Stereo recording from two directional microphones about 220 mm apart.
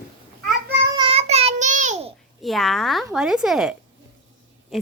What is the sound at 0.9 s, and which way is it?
Child singing, 25° right (ahead or behind).